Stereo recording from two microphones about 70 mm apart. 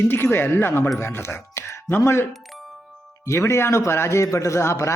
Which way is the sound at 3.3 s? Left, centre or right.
Left.